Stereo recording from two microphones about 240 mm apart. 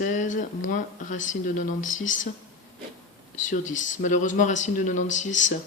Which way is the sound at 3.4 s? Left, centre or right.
Left.